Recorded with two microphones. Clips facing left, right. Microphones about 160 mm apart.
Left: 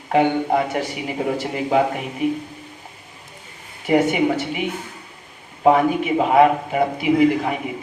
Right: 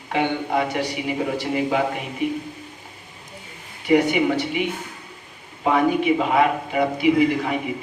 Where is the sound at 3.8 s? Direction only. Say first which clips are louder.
Left 1 dB; 45° left (ahead or behind).